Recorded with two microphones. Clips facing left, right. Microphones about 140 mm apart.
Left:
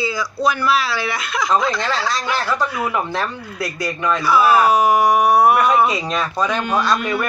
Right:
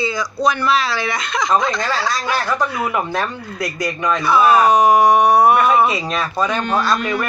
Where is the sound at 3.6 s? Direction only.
15° right (ahead or behind).